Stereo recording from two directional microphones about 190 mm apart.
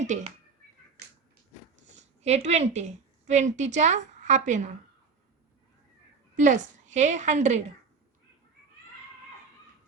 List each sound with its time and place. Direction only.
0.0 s a woman's voice: 40° right (ahead or behind)
1.0 s a sound: 60° right (ahead or behind)
2.2 s a woman's voice: 35° right (ahead or behind)
6.3 s a woman's voice: 40° right (ahead or behind)